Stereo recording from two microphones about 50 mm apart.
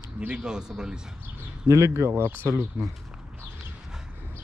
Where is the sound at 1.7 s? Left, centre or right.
Right.